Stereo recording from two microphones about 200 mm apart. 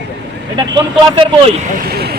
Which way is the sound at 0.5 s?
25° right (ahead or behind).